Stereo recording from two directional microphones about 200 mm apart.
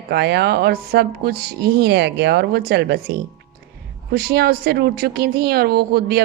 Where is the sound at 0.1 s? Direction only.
55° right (ahead or behind).